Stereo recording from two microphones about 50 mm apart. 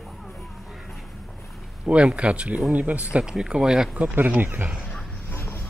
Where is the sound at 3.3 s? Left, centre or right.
Centre.